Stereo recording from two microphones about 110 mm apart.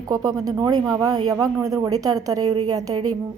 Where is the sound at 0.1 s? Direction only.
35° right (ahead or behind).